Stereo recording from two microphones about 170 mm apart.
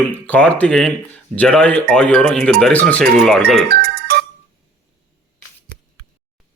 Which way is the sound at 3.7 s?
60° right (ahead or behind).